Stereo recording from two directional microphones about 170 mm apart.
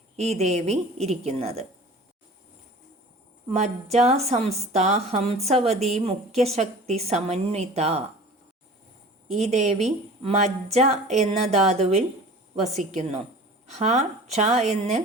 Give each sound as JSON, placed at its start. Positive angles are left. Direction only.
{"t": 0.2, "sound": "a woman's voice", "side_deg": -40}
{"t": 3.5, "sound": "a woman's voice", "side_deg": -40}
{"t": 9.3, "sound": "a woman's voice", "side_deg": -40}